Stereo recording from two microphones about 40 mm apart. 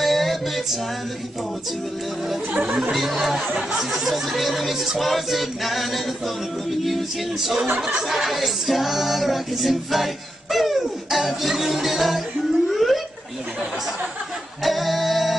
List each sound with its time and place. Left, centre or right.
0.0 s music: centre
2.5 s speech: right
2.9 s speech: centre
7.3 s speech: centre
8.1 s music: centre
12.6 s a sound: centre
14.6 s singing: centre